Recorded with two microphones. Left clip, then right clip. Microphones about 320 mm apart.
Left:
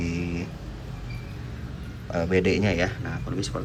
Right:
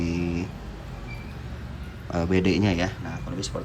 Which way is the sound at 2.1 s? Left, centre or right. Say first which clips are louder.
Left 1 dB; centre.